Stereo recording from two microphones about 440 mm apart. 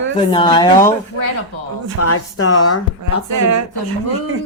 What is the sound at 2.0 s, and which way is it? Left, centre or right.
Speech, left.